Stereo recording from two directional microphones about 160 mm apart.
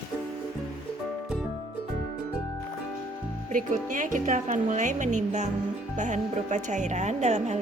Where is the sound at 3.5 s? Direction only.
55° right (ahead or behind).